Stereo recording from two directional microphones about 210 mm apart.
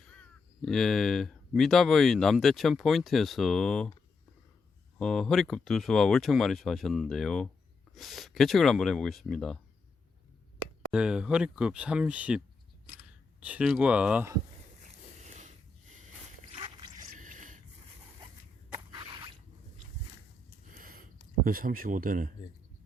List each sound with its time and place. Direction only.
0.0 s speech: 5° left (ahead or behind)
4.9 s speech: centre (ahead or behind)
10.9 s speech: 5° right (ahead or behind)
13.4 s speech: 5° right (ahead or behind)
15.3 s snort: 35° right (ahead or behind)
16.5 s a sound: 25° right (ahead or behind)
17.2 s a sound: 40° right (ahead or behind)
20.7 s a sound: 40° right (ahead or behind)
21.4 s speech: 45° right (ahead or behind)